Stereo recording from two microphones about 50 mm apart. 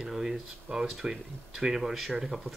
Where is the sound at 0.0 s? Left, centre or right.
Centre.